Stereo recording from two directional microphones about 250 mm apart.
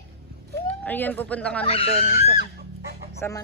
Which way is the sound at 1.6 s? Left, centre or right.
Left.